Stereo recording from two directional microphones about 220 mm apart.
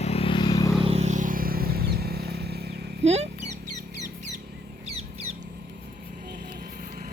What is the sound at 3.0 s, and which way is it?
Speech, 30° right (ahead or behind).